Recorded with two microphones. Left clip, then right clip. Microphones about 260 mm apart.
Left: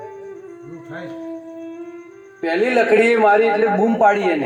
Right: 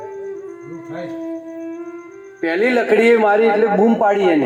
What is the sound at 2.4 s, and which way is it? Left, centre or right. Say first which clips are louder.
A man's voice: even; right.